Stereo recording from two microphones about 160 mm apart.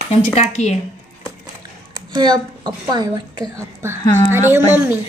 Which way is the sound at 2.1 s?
25° right (ahead or behind).